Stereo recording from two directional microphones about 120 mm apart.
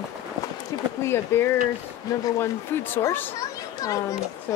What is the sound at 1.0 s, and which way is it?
Speech, 20° left (ahead or behind).